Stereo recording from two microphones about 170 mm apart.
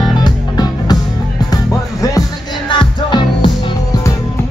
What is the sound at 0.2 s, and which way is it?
Music, 25° left (ahead or behind).